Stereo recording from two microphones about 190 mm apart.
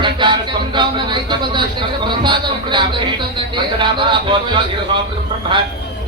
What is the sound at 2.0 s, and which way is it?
Music, 25° right (ahead or behind).